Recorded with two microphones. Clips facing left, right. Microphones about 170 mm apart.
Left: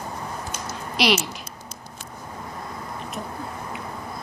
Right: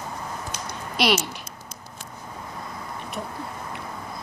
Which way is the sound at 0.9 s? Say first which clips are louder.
Left 1 dB; centre (ahead or behind).